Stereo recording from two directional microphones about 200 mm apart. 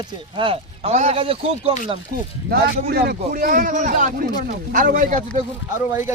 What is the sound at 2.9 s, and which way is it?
Speech, 50° right (ahead or behind).